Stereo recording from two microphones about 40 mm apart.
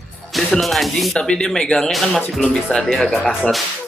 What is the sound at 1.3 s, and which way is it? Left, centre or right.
Speech, centre.